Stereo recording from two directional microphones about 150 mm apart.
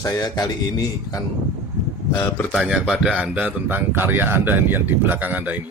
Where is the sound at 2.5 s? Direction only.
5° right (ahead or behind).